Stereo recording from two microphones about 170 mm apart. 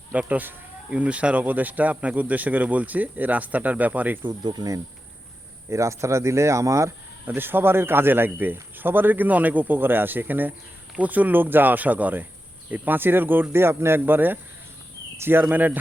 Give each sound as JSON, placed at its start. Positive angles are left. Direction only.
{"t": 0.1, "sound": "speech", "side_deg": -10}
{"t": 4.2, "sound": "cricket", "side_deg": -25}
{"t": 5.6, "sound": "speech", "side_deg": -15}